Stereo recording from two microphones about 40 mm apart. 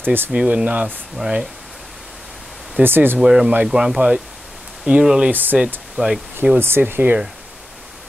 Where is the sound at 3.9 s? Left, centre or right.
Right.